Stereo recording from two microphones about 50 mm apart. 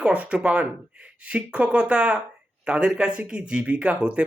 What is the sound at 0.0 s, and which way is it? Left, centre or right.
Speech, right.